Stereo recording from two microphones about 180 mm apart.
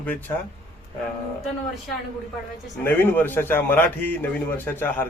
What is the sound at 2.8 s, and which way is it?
A man's voice, 10° left (ahead or behind).